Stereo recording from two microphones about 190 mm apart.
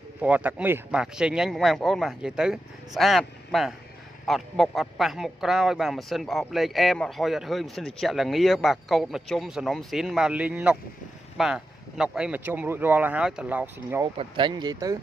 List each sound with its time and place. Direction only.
0.2 s a man's voice: 10° right (ahead or behind)
14.0 s speech: 25° right (ahead or behind)